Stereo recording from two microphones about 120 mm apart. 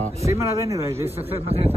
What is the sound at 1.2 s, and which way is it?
Speech, 55° right (ahead or behind).